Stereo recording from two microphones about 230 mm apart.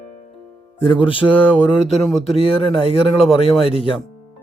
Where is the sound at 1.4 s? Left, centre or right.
Centre.